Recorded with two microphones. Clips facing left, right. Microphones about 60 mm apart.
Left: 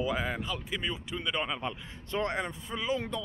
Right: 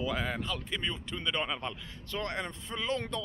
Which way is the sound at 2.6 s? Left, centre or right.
Centre.